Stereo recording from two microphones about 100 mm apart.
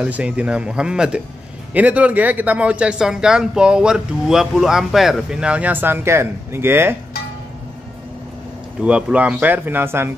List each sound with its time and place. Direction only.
0.0 s speech: 15° right (ahead or behind)
8.8 s speech: 10° right (ahead or behind)